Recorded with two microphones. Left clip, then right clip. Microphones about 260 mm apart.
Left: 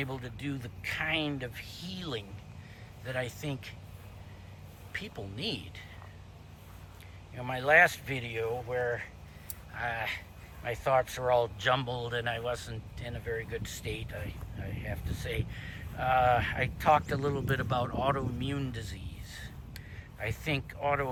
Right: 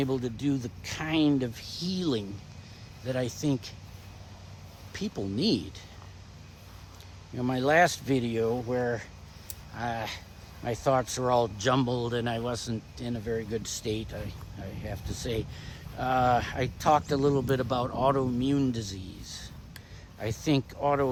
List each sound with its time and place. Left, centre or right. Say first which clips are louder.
0.2 s speech: right 9 dB; centre
4.9 s speech: right 5 dB; centre
7.3 s speech: even; centre